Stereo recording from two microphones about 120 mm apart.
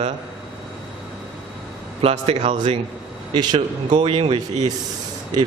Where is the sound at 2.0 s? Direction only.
60° right (ahead or behind).